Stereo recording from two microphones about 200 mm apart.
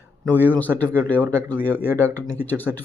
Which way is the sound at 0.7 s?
10° right (ahead or behind).